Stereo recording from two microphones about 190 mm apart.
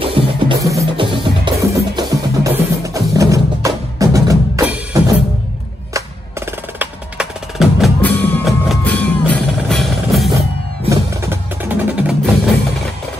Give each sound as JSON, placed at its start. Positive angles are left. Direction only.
{"t": 0.0, "sound": "music", "side_deg": -30}
{"t": 0.6, "sound": "music", "side_deg": -15}
{"t": 1.0, "sound": "music", "side_deg": -25}
{"t": 1.6, "sound": "percussion", "side_deg": -15}
{"t": 8.5, "sound": "music", "side_deg": 5}
{"t": 10.9, "sound": "music", "side_deg": -10}